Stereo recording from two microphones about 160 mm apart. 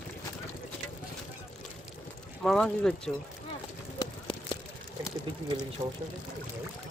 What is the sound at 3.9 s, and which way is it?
Run, 30° left (ahead or behind).